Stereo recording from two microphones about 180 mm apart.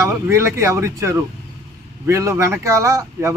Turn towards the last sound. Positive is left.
turn(degrees=-15)  # may be behind; listen again after turning